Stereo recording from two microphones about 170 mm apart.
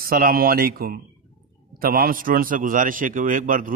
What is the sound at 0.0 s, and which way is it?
A man's voice, 60° right (ahead or behind).